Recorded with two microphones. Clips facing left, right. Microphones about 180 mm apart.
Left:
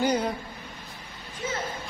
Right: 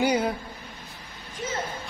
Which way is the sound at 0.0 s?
10° right (ahead or behind).